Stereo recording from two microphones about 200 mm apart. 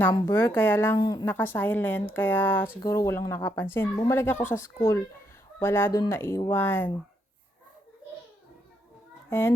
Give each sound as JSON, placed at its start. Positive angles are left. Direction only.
{"t": 0.1, "sound": "a woman's voice", "side_deg": 15}
{"t": 9.3, "sound": "a woman's voice", "side_deg": 10}